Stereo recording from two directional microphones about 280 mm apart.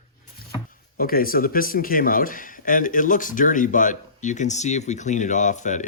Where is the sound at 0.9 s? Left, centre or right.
Left.